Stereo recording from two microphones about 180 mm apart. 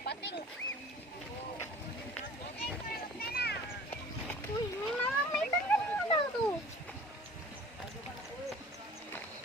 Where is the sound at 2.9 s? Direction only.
60° left (ahead or behind).